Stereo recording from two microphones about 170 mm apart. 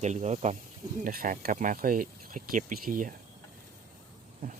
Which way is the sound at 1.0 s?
55° right (ahead or behind).